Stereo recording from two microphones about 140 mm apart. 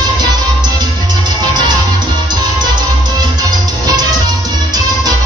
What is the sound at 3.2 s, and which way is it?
Music, 30° right (ahead or behind).